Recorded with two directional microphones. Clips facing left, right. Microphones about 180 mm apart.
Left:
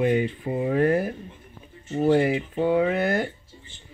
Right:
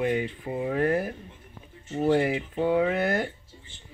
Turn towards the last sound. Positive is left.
turn(degrees=20)  # may be behind; listen again after turning